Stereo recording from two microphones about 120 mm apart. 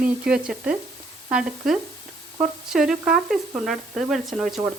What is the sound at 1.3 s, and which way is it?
Sizzle, 5° right (ahead or behind).